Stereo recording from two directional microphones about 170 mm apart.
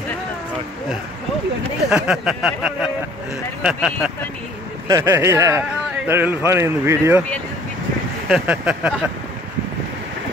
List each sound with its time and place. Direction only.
1.9 s speech: 5° right (ahead or behind)
4.8 s speech: 20° right (ahead or behind)
8.3 s speech: 10° right (ahead or behind)